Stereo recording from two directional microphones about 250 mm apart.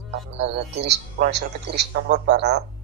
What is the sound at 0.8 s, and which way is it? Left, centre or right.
Speech, right.